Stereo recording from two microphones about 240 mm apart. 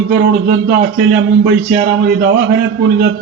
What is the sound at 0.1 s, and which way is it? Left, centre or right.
A man's voice, right.